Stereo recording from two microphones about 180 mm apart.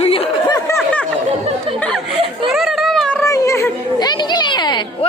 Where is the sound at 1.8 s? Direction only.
Centre (ahead or behind).